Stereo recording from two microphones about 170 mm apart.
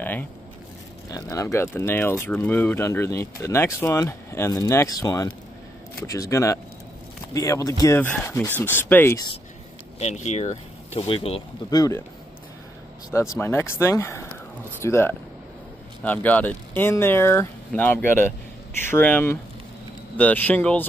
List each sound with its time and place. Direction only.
0.0 s speech: 10° left (ahead or behind)
9.9 s speech: 40° left (ahead or behind)
11.7 s speech: 20° left (ahead or behind)
13.3 s speech: 15° left (ahead or behind)